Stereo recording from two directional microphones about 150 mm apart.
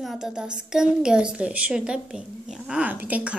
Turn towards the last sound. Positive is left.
turn(degrees=-10)  # may be behind; listen again after turning